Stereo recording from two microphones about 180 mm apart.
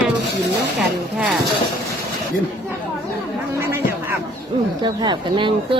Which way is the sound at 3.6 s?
15° right (ahead or behind).